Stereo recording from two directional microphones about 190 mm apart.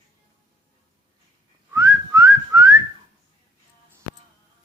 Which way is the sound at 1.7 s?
15° right (ahead or behind).